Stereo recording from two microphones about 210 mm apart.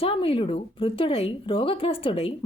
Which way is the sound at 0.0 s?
25° left (ahead or behind).